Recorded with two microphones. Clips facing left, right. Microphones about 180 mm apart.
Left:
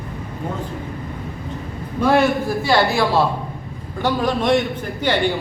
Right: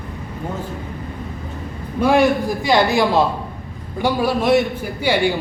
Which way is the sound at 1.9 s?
10° right (ahead or behind).